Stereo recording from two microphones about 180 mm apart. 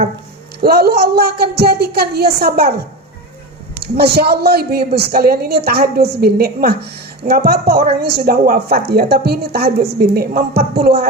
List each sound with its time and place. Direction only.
0.6 s a woman's voice: 60° right (ahead or behind)
3.8 s a woman's voice: 65° right (ahead or behind)